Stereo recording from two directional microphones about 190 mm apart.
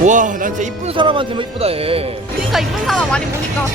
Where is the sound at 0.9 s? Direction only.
25° right (ahead or behind).